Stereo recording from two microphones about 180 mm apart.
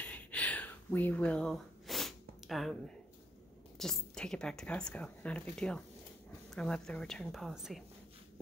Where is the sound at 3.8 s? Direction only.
5° left (ahead or behind).